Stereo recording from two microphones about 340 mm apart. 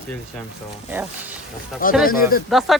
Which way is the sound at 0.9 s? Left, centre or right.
Centre.